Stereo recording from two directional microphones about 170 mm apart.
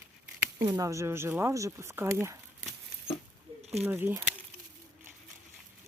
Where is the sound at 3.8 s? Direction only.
10° right (ahead or behind).